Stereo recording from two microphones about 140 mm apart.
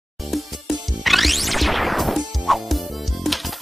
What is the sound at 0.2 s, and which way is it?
Music, centre (ahead or behind).